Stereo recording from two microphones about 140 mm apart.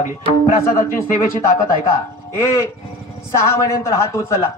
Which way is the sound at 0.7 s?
20° left (ahead or behind).